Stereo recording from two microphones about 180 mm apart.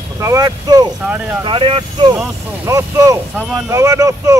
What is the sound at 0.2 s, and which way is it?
Speech, 20° right (ahead or behind).